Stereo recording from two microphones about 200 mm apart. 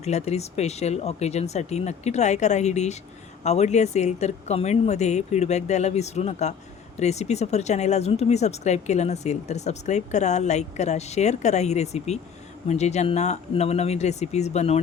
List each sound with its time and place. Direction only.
0.0 s speech: 35° left (ahead or behind)